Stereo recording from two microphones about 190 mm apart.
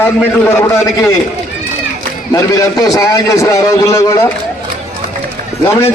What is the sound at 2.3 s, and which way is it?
A man's voice, 15° left (ahead or behind).